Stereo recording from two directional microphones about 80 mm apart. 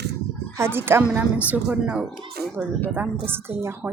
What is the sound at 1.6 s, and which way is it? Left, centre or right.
Speech, centre.